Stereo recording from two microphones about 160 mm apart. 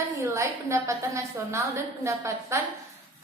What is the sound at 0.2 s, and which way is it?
A woman's voice, 20° right (ahead or behind).